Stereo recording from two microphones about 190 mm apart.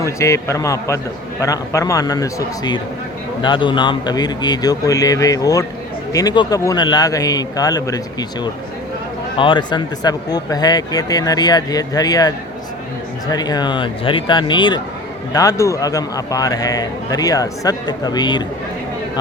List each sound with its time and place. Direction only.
0.0 s a man's voice: 15° left (ahead or behind)
13.3 s a man's voice: 20° left (ahead or behind)